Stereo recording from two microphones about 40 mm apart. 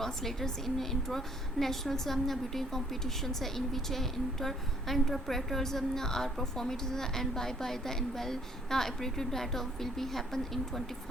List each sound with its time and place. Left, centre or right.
0.0 s a woman's voice: centre